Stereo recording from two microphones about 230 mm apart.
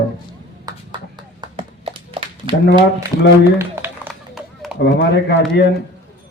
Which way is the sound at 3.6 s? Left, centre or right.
Centre.